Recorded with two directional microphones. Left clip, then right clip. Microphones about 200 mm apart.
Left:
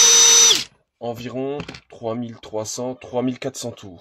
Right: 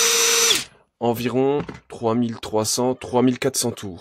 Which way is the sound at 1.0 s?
55° right (ahead or behind).